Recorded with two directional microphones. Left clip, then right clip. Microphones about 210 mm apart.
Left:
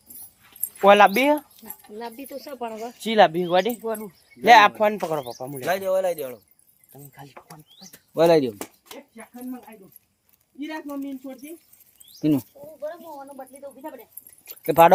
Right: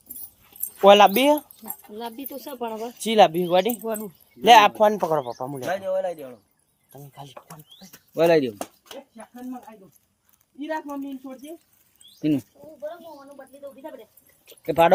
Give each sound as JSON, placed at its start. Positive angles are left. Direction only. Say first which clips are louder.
{"t": 0.8, "sound": "speech", "louder": "right 1 dB", "side_deg": -10}
{"t": 2.0, "sound": "speech", "louder": "even", "side_deg": -50}
{"t": 3.0, "sound": "speech", "louder": "even", "side_deg": 0}
{"t": 3.8, "sound": "speech", "louder": "even", "side_deg": -40}
{"t": 4.4, "sound": "speech", "louder": "even", "side_deg": -20}
{"t": 5.6, "sound": "speech", "louder": "left 4 dB", "side_deg": 55}
{"t": 7.1, "sound": "speech", "louder": "right 2 dB", "side_deg": -30}
{"t": 8.1, "sound": "speech", "louder": "left 1 dB", "side_deg": 20}
{"t": 8.8, "sound": "speech", "louder": "right 1 dB", "side_deg": -5}
{"t": 10.7, "sound": "speech", "louder": "right 3 dB", "side_deg": -5}
{"t": 14.4, "sound": "a sound", "louder": "left 3 dB", "side_deg": 40}